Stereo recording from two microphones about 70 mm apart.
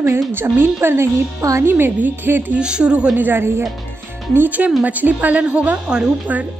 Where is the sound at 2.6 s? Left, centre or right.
Centre.